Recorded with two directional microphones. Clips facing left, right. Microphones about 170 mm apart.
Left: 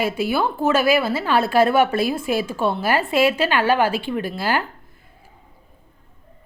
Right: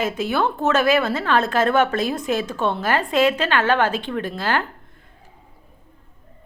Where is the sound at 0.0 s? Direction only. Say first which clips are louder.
Left 1 dB; 10° left (ahead or behind).